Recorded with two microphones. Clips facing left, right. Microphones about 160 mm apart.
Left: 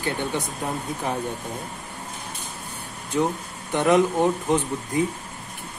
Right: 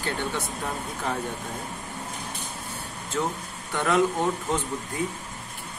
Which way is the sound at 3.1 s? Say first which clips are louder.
Left 5 dB; 20° left (ahead or behind).